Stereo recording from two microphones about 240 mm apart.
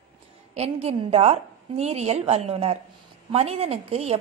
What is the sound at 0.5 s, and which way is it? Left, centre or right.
A woman's voice, right.